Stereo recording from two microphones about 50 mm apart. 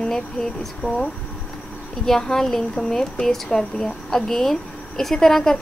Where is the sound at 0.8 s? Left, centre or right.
Left.